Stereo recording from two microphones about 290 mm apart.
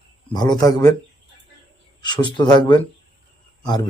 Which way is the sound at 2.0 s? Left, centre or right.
Centre.